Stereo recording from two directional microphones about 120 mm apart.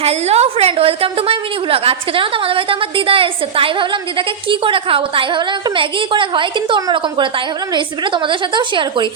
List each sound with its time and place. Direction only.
0.0 s a woman's voice: 65° right (ahead or behind); by 9.0 s 40° right (ahead or behind)